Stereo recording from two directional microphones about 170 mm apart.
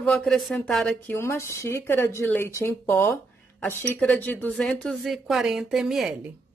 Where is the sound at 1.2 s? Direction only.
15° left (ahead or behind); by 6.2 s centre (ahead or behind).